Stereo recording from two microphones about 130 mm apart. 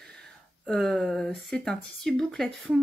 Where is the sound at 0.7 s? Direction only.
Centre (ahead or behind).